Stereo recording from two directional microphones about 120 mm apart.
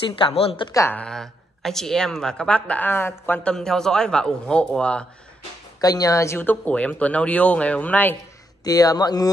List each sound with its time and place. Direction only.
0.2 s a woman's voice: 55° left (ahead or behind)
0.7 s speech: 25° left (ahead or behind)
0.9 s speech: 5° left (ahead or behind)
3.5 s a man's voice: 5° left (ahead or behind)
5.8 s speech: 30° left (ahead or behind); by 8.2 s 15° left (ahead or behind)
8.6 s speech: 30° left (ahead or behind)